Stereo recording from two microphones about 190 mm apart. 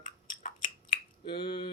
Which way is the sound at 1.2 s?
25° left (ahead or behind).